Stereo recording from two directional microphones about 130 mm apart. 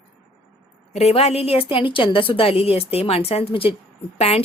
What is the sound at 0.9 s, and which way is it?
A woman's voice, 50° left (ahead or behind).